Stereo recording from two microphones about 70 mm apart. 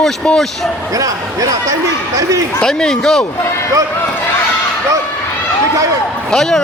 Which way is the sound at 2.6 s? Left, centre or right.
Centre.